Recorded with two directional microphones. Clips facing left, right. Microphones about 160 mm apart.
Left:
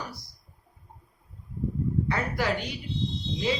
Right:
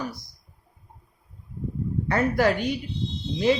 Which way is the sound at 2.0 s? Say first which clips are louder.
Right 11 dB; 50° right (ahead or behind).